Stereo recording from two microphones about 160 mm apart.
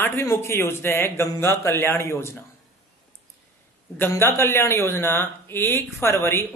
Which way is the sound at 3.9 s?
15° left (ahead or behind).